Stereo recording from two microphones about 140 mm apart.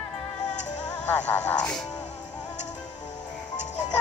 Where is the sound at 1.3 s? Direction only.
10° left (ahead or behind).